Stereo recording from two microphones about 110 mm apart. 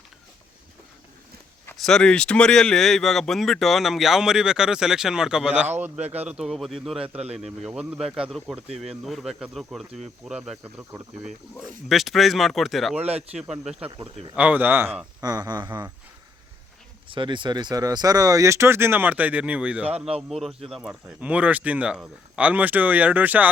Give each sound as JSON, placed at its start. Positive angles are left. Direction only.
{"t": 1.8, "sound": "speech", "side_deg": 5}
{"t": 6.0, "sound": "speech", "side_deg": -70}
{"t": 6.2, "sound": "speech", "side_deg": -5}
{"t": 10.6, "sound": "speech", "side_deg": -15}
{"t": 11.6, "sound": "speech", "side_deg": 0}
{"t": 15.2, "sound": "speech", "side_deg": -35}
{"t": 17.1, "sound": "speech", "side_deg": -45}
{"t": 21.2, "sound": "speech", "side_deg": -15}